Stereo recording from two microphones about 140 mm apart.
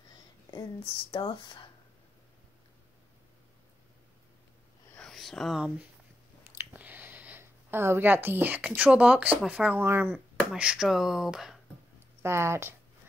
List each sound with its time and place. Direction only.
1.1 s speech: 35° left (ahead or behind)
4.9 s whispering: centre (ahead or behind)
6.5 s a sound: 15° right (ahead or behind)
9.4 s speech: 5° right (ahead or behind)
12.2 s speech: 20° right (ahead or behind)